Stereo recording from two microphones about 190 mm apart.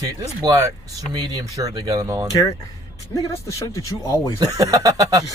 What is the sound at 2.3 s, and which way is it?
Speech, 20° left (ahead or behind).